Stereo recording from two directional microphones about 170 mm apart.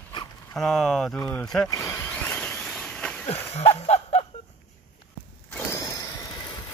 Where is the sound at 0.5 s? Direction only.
5° left (ahead or behind).